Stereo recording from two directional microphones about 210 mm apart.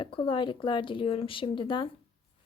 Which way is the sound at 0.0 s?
25° left (ahead or behind).